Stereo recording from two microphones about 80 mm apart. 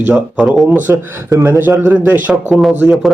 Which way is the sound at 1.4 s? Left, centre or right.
Right.